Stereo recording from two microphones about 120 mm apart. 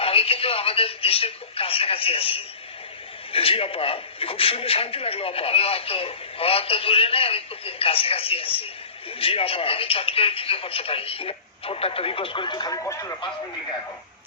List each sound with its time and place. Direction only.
0.0 s a man's voice: 55° left (ahead or behind); by 13.1 s 25° left (ahead or behind)